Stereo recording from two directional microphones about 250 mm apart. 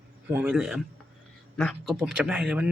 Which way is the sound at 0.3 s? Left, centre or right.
Centre.